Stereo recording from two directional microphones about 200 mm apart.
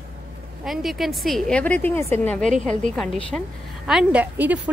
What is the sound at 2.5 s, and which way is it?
Speech, 35° right (ahead or behind).